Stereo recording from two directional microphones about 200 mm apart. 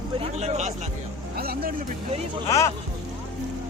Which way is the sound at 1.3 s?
50° right (ahead or behind).